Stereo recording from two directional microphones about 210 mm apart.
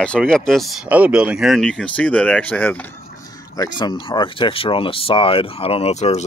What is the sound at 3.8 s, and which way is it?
Speech, 20° left (ahead or behind).